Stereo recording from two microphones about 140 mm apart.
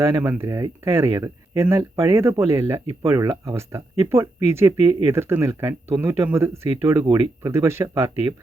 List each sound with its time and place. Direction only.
0.0 s speech: 20° right (ahead or behind)